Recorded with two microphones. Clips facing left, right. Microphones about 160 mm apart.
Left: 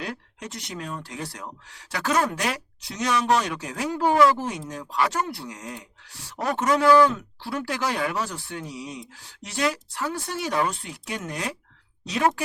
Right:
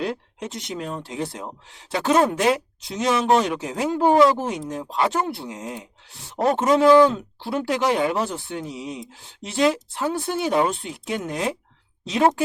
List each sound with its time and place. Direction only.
0.0 s speech: 25° right (ahead or behind)